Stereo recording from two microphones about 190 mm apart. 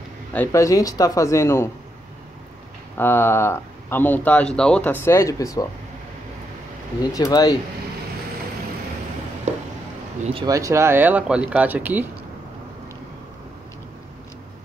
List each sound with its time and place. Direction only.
0.3 s speech: 10° left (ahead or behind)
3.0 s speech: 10° left (ahead or behind)
7.2 s speech: 20° left (ahead or behind)
10.2 s speech: 25° right (ahead or behind)